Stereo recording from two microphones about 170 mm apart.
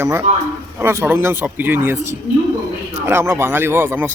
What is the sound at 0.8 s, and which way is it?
Speech, 15° right (ahead or behind).